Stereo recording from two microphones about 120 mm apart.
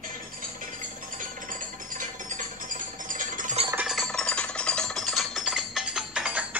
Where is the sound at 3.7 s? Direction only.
5° right (ahead or behind).